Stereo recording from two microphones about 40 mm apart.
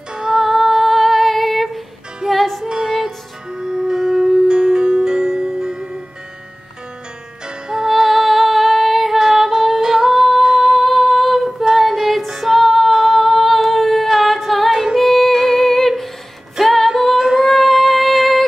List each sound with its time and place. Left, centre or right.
0.1 s music: right
0.4 s humming: centre
2.2 s music: centre
2.6 s music: centre
7.4 s music: centre
7.9 s music: centre
9.2 s female singing: centre
10.4 s singing: centre
11.6 s female singing: centre
12.3 s singing: centre
15.0 s music: centre